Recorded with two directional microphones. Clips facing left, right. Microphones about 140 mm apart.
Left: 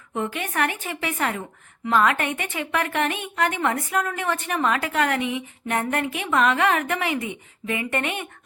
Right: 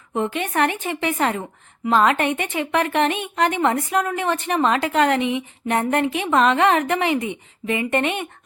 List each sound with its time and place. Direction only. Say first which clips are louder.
0.1 s a woman's voice: right 4 dB; 25° right (ahead or behind)